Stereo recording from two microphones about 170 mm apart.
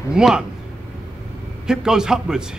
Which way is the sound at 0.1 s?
5° right (ahead or behind).